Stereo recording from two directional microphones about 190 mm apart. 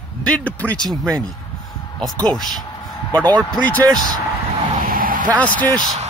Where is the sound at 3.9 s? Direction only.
20° right (ahead or behind).